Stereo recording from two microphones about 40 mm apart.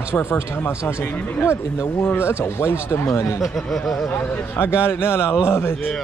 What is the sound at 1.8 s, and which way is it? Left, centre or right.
Speech, left.